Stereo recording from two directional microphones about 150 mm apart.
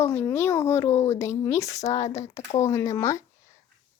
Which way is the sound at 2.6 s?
20° left (ahead or behind).